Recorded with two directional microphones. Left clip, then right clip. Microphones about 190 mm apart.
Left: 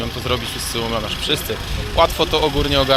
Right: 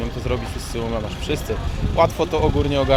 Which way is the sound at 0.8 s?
Centre (ahead or behind).